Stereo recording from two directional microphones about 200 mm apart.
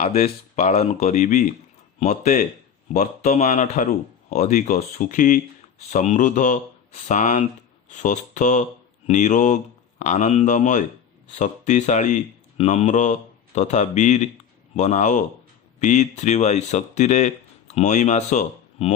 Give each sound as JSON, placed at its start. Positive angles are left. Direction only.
{"t": 0.0, "sound": "speech", "side_deg": 30}